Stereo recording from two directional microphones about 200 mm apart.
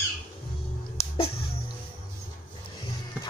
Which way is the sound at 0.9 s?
30° left (ahead or behind).